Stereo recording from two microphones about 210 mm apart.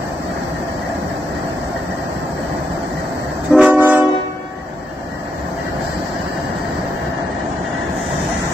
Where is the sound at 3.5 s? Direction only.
5° right (ahead or behind).